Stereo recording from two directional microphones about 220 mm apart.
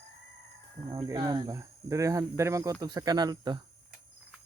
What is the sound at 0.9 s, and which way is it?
Speech, 15° right (ahead or behind).